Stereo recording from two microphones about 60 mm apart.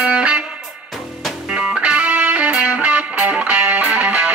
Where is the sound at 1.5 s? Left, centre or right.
Centre.